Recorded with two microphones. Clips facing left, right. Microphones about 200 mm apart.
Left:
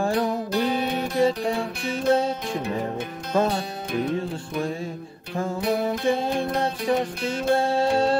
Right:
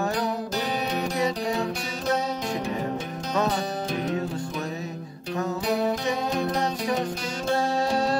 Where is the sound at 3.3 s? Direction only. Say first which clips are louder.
Left 3 dB; 30° left (ahead or behind).